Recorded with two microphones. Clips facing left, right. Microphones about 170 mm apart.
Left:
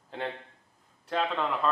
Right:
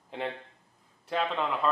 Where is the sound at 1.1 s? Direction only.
Centre (ahead or behind).